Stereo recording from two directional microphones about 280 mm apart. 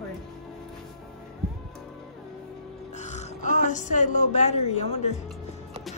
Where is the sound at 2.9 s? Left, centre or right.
Left.